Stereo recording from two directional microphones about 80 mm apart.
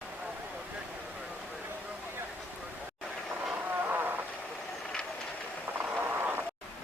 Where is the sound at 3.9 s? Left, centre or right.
Right.